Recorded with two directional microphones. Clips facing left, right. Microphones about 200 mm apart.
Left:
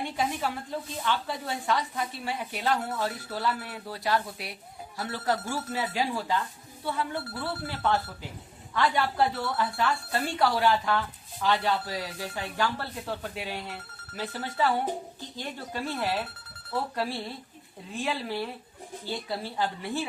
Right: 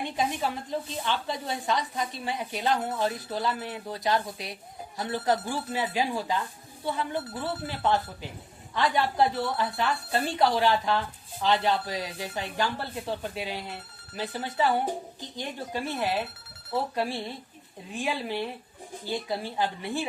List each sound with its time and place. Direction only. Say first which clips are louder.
0.0 s speech: right 1 dB; 20° right (ahead or behind)